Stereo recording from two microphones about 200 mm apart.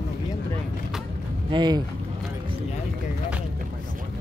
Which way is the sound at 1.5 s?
20° right (ahead or behind).